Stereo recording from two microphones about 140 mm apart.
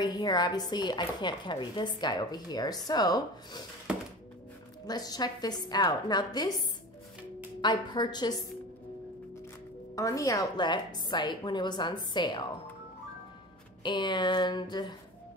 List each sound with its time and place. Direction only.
0.0 s speech: 30° left (ahead or behind)
4.8 s speech: 30° left (ahead or behind)
7.6 s a woman's voice: 30° left (ahead or behind)
9.9 s a woman's voice: 25° left (ahead or behind)
13.8 s a woman's voice: 35° left (ahead or behind)